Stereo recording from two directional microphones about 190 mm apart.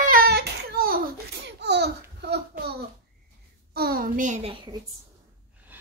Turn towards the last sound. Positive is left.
turn(degrees=-10)  # may be behind; listen again after turning